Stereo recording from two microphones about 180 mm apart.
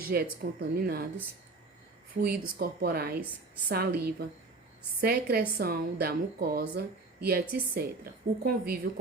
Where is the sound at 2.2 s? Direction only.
60° right (ahead or behind).